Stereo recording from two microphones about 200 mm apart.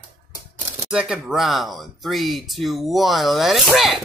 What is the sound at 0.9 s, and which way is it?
Speech, centre (ahead or behind).